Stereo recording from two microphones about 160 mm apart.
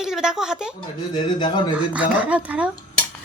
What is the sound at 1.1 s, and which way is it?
Speech, 30° left (ahead or behind).